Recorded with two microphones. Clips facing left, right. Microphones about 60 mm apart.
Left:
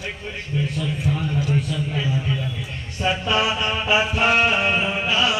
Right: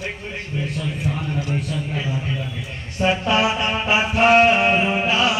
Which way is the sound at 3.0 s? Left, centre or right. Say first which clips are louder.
Right 3 dB; right.